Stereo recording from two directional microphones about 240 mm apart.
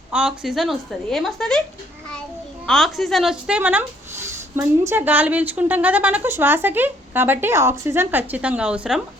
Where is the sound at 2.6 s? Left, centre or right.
Centre.